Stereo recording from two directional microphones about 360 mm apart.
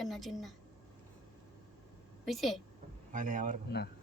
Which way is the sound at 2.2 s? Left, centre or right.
Centre.